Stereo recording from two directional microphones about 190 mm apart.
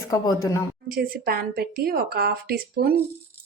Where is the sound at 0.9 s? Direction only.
55° right (ahead or behind).